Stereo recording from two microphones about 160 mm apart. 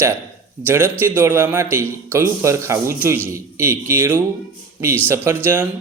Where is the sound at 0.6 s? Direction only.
15° right (ahead or behind).